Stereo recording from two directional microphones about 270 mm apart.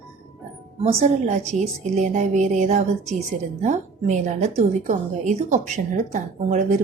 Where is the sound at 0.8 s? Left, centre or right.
Right.